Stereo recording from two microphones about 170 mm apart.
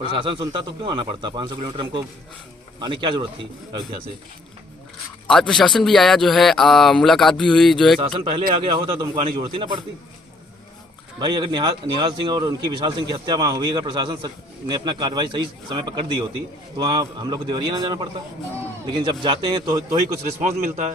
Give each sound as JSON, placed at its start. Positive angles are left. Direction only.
{"t": 0.1, "sound": "speech", "side_deg": -30}
{"t": 5.3, "sound": "speech", "side_deg": 5}
{"t": 8.0, "sound": "a man's voice", "side_deg": -30}
{"t": 11.2, "sound": "speech", "side_deg": -25}
{"t": 20.4, "sound": "a man's voice", "side_deg": -50}